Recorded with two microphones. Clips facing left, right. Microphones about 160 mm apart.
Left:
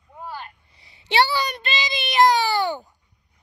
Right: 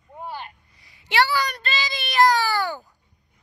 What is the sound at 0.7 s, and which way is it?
Child singing, 25° left (ahead or behind).